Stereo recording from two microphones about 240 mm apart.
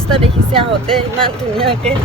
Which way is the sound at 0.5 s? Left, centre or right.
Right.